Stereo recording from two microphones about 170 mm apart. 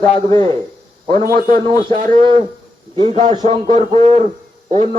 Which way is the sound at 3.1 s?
40° right (ahead or behind).